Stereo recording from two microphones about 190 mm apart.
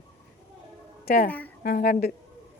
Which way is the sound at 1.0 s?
50° left (ahead or behind).